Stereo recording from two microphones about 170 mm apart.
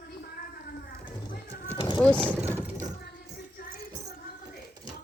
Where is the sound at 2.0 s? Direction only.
5° left (ahead or behind).